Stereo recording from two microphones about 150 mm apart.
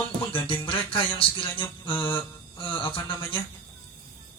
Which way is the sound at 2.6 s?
35° left (ahead or behind).